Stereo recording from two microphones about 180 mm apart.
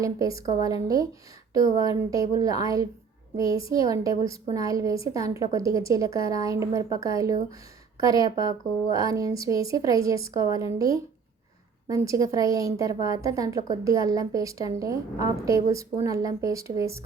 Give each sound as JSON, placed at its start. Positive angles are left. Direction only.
{"t": 0.0, "sound": "a woman's voice", "side_deg": -20}
{"t": 2.0, "sound": "a woman's voice", "side_deg": -20}